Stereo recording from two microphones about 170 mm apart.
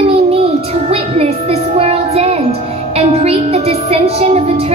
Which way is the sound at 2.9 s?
35° right (ahead or behind).